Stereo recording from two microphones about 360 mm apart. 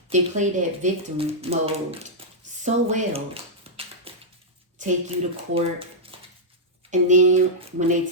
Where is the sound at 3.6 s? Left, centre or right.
Centre.